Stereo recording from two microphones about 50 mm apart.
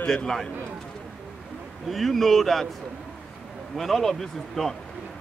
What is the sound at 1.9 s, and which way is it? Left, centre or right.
Speech, centre.